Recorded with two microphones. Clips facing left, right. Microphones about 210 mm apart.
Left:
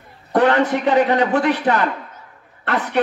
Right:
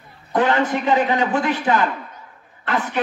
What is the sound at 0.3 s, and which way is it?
A man's voice, 65° left (ahead or behind).